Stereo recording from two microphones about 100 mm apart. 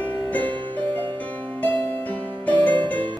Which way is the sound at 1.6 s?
15° left (ahead or behind).